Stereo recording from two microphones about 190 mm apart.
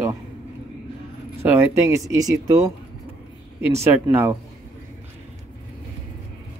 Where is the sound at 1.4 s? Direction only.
10° right (ahead or behind).